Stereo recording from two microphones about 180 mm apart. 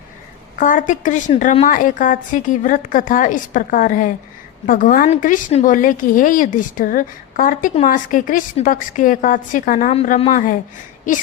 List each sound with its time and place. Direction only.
0.6 s a woman's voice: 45° left (ahead or behind)
9.9 s a woman's voice: 35° left (ahead or behind)